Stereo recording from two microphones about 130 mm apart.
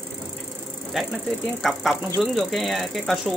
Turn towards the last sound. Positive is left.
turn(degrees=0)  # may be behind; listen again after turning